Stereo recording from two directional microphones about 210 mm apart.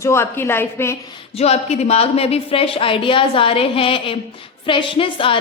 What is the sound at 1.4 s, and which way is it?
A woman's voice, 30° left (ahead or behind).